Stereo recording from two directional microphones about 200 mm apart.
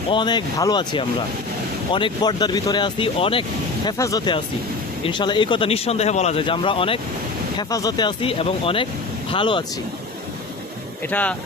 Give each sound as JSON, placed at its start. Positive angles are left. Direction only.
{"t": 0.1, "sound": "speech", "side_deg": 20}
{"t": 3.8, "sound": "speech", "side_deg": 15}
{"t": 11.1, "sound": "speech", "side_deg": 5}